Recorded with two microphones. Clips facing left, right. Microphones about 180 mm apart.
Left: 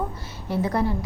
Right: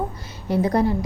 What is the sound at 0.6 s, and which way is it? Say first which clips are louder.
Speech: right 4 dB; 40° right (ahead or behind).